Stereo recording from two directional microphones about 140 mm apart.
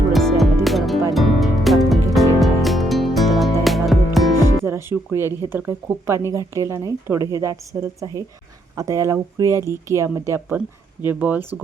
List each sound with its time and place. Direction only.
0.1 s music: centre (ahead or behind)
4.6 s a woman's voice: 20° right (ahead or behind)